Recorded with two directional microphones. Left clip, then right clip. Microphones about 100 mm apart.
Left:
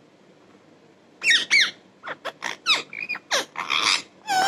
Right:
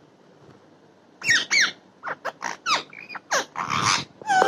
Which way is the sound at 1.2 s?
35° right (ahead or behind).